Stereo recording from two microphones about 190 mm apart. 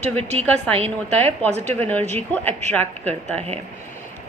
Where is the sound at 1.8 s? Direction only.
10° left (ahead or behind).